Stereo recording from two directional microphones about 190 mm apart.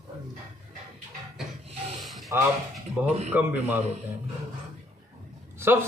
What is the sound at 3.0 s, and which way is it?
Speech, 35° right (ahead or behind).